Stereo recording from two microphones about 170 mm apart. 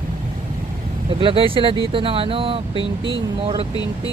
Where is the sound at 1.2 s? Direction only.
30° right (ahead or behind).